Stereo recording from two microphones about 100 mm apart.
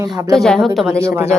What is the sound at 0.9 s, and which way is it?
Speech, 30° right (ahead or behind).